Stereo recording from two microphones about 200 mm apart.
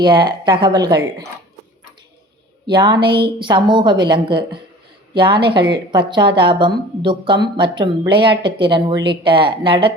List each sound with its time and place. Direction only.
0.0 s a woman's voice: 20° right (ahead or behind)
2.6 s a woman's voice: 20° right (ahead or behind)